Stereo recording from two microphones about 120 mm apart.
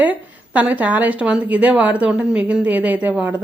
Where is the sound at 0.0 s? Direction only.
10° right (ahead or behind).